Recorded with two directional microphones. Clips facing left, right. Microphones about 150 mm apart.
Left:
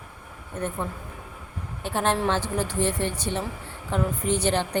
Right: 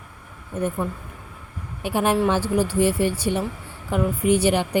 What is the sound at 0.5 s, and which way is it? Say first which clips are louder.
Speech: right 5 dB; 10° right (ahead or behind).